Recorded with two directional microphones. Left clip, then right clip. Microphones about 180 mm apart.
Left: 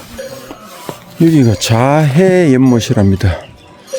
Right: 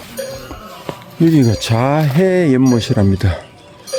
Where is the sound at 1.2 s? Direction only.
20° left (ahead or behind).